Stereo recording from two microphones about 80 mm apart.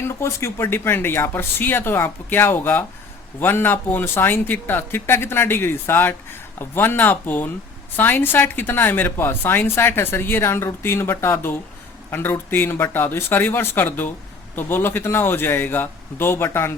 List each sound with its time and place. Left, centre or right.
0.0 s a woman's voice: left